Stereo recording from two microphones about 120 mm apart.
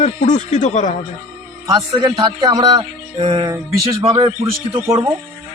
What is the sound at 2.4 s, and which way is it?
Music, 40° right (ahead or behind).